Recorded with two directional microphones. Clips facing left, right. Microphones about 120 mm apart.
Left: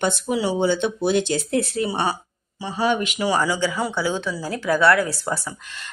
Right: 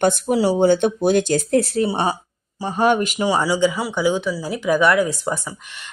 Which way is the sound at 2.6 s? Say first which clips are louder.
Right 4 dB; 50° right (ahead or behind).